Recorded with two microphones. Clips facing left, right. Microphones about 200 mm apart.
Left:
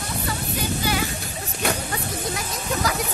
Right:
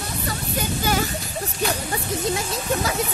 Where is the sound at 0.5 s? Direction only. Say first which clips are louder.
Right 2 dB; 45° right (ahead or behind).